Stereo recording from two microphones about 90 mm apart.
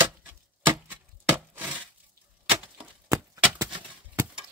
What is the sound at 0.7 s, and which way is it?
Chop, 25° right (ahead or behind).